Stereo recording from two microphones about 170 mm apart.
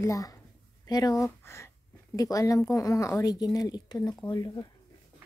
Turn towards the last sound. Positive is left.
turn(degrees=25)  # may be behind; listen again after turning